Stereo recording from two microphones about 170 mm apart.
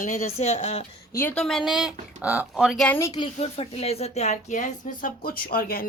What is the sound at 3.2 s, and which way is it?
Speech, 35° left (ahead or behind).